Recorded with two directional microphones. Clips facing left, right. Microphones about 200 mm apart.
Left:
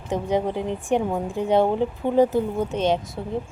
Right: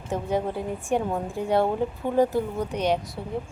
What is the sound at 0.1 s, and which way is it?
A woman's voice, 20° left (ahead or behind).